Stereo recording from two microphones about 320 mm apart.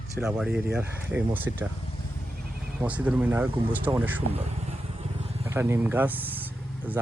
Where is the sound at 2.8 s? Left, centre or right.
Centre.